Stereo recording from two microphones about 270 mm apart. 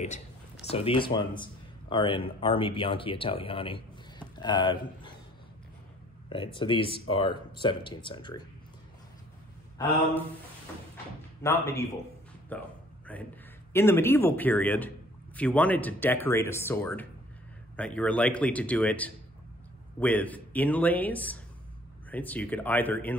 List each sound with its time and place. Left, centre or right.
0.7 s speech: centre
6.2 s speech: centre
11.4 s speech: centre
12.4 s a sound: centre
13.7 s a man's voice: centre